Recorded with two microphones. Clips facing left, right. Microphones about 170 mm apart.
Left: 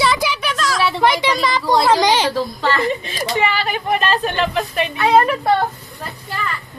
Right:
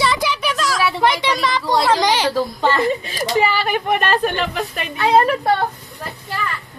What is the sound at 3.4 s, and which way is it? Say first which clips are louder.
A woman's voice: right 3 dB; 40° right (ahead or behind).